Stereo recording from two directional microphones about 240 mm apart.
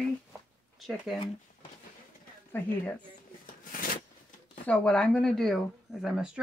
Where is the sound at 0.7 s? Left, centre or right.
Centre.